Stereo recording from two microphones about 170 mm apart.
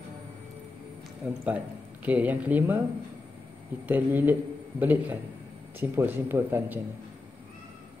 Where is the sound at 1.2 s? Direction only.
10° right (ahead or behind).